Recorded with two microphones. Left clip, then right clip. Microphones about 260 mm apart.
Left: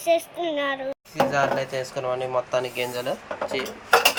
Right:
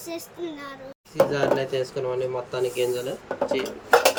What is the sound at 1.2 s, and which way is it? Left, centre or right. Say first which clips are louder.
Speech: even; centre.